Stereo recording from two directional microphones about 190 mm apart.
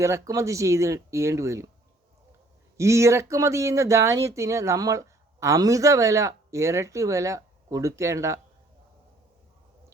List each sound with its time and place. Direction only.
0.0 s speech: 15° right (ahead or behind)
2.7 s speech: 15° right (ahead or behind)